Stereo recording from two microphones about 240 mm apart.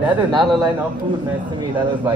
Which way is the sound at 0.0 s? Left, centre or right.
Centre.